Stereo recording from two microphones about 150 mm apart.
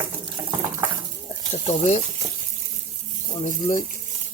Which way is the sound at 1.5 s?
45° left (ahead or behind).